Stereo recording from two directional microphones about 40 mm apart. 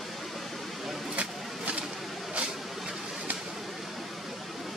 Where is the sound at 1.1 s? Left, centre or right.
Right.